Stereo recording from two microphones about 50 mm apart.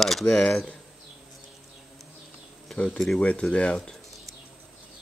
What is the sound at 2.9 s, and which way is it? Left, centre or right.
Speech, centre.